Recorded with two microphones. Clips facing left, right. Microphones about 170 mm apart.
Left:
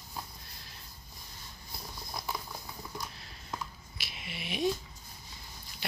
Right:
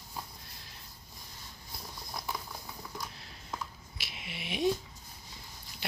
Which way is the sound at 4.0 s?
15° right (ahead or behind).